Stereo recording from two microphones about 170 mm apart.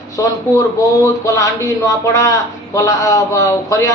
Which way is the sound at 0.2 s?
20° left (ahead or behind).